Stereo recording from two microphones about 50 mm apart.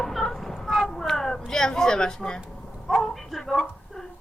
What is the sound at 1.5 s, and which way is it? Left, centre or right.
Speech, centre.